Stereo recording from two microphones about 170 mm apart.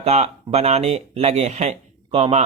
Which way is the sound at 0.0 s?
40° right (ahead or behind).